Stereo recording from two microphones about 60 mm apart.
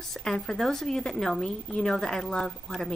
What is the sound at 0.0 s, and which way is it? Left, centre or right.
A woman's voice, centre.